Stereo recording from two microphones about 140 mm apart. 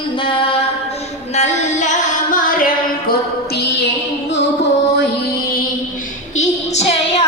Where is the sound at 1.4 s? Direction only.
60° left (ahead or behind).